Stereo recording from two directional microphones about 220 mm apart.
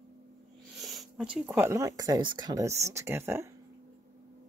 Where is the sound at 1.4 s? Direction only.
10° right (ahead or behind).